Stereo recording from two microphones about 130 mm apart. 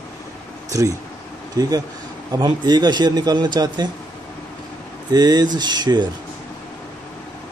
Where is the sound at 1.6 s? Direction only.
30° right (ahead or behind).